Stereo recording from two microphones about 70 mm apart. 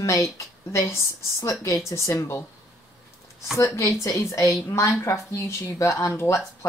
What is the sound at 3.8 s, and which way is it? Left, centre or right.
Speech, left.